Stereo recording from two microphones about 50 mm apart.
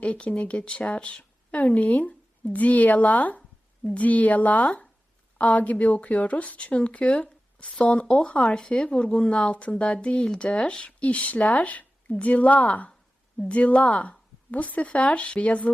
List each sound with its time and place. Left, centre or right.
0.0 s a woman's voice: left
8.5 s a woman's voice: centre